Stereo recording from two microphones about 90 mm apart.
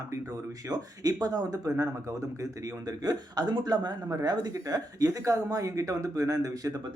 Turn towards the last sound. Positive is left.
turn(degrees=-40)  # may be behind; listen again after turning